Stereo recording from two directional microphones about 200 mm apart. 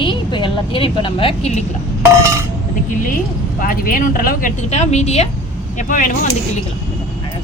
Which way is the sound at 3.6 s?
45° left (ahead or behind).